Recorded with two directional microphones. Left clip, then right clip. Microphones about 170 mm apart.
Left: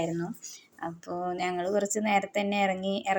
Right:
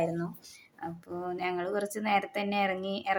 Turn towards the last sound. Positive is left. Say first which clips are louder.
# left 3 dB
turn(degrees=0)  # may be behind; listen again after turning